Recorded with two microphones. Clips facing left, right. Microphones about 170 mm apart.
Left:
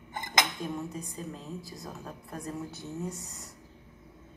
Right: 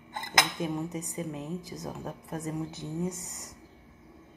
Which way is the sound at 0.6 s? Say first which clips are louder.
Right 3 dB; 20° right (ahead or behind).